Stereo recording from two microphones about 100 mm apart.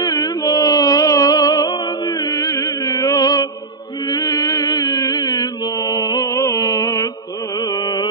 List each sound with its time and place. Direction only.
0.0 s music: 40° left (ahead or behind)
7.5 s carnatic music: 40° left (ahead or behind)